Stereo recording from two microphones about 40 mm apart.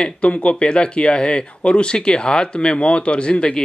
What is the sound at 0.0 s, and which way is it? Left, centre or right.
Speech, left.